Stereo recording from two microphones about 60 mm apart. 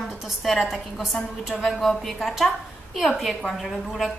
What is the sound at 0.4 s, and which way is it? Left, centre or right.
A woman's voice, centre.